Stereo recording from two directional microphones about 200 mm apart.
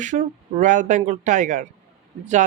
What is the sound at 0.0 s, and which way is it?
Speech, 40° right (ahead or behind).